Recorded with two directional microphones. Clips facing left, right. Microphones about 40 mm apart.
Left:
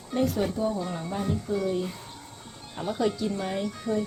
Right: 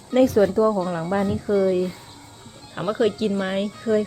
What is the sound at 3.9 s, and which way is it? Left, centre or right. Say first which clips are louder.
Speech: right 8 dB; right.